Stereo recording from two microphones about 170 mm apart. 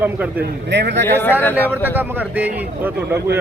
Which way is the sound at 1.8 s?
10° right (ahead or behind).